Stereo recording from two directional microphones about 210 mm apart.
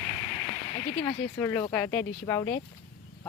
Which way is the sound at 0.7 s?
30° left (ahead or behind).